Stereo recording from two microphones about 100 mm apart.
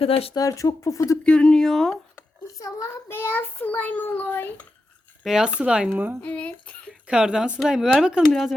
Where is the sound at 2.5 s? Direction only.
35° left (ahead or behind).